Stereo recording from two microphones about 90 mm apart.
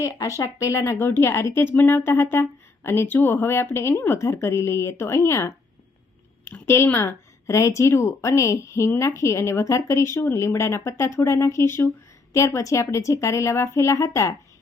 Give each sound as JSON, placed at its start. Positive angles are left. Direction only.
{"t": 0.0, "sound": "speech", "side_deg": 35}
{"t": 6.4, "sound": "speech", "side_deg": 25}